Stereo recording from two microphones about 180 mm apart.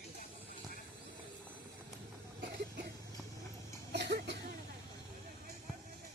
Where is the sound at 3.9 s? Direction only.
70° right (ahead or behind).